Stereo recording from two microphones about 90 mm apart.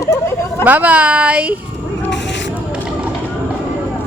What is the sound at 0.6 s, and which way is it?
Speech, 20° right (ahead or behind).